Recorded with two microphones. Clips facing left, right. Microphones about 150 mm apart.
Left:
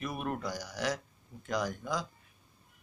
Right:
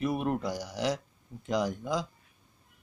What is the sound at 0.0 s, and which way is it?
Speech, 25° right (ahead or behind).